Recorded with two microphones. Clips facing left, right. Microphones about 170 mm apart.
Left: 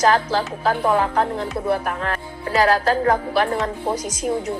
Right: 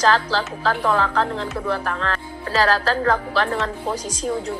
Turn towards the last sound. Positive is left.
turn(degrees=10)  # may be behind; listen again after turning